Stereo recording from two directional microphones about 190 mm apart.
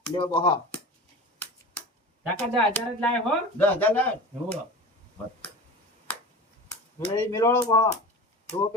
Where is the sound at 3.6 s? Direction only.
10° left (ahead or behind).